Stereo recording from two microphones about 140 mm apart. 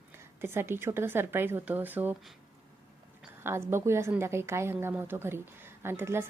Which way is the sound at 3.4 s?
20° right (ahead or behind).